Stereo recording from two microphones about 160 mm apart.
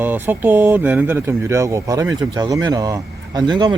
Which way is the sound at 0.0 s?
10° right (ahead or behind).